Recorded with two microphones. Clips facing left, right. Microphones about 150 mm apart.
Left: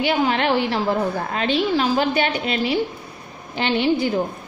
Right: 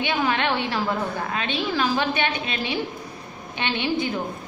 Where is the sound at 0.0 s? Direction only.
30° left (ahead or behind).